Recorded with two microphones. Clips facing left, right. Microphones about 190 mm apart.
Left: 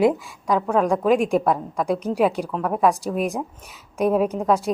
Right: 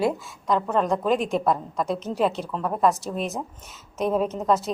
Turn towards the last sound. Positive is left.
turn(degrees=10)  # may be behind; listen again after turning